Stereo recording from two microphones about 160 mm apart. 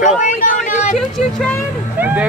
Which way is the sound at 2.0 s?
10° right (ahead or behind).